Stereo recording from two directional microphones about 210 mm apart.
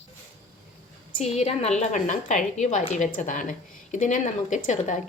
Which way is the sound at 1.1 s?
30° left (ahead or behind).